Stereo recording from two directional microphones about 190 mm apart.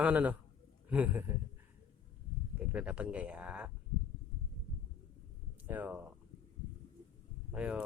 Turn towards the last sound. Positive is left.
turn(degrees=-5)  # may be behind; listen again after turning